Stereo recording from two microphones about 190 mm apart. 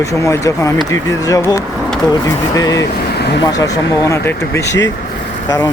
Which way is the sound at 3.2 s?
60° left (ahead or behind).